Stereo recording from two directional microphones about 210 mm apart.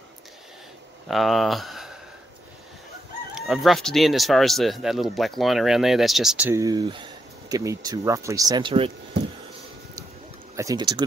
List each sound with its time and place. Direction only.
1.0 s speech: centre (ahead or behind)
3.3 s speech: 5° right (ahead or behind); by 8.9 s 25° right (ahead or behind)
10.5 s speech: 15° right (ahead or behind)